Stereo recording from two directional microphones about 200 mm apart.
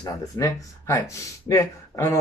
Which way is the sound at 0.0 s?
15° left (ahead or behind).